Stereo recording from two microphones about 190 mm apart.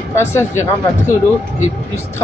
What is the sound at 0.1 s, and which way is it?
Speech, 15° left (ahead or behind).